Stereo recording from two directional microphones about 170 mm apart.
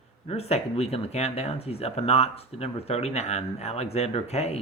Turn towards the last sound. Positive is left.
turn(degrees=40)  # may be behind; listen again after turning